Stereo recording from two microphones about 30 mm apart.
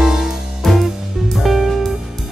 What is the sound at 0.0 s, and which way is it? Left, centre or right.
Music, centre.